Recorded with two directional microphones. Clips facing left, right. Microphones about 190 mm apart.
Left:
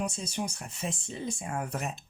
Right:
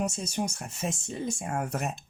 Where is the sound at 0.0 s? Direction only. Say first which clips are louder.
Right 3 dB; 45° right (ahead or behind).